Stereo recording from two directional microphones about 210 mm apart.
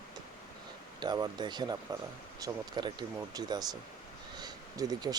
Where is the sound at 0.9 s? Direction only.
20° right (ahead or behind).